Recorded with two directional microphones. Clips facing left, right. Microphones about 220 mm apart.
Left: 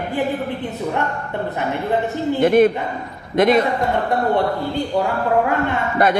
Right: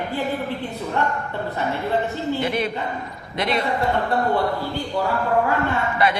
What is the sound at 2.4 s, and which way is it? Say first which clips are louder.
A man's voice: left 10 dB; 50° left (ahead or behind).